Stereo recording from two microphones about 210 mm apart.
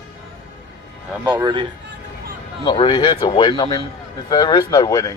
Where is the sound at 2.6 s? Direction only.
20° left (ahead or behind).